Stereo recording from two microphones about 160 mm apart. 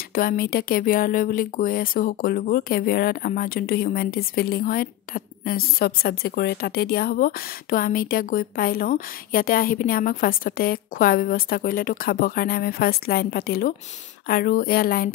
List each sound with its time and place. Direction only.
0.1 s speech: 65° left (ahead or behind)